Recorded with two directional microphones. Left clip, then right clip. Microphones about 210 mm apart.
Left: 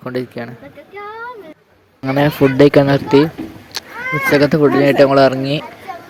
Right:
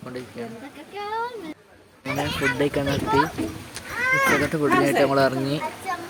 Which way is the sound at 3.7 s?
25° left (ahead or behind).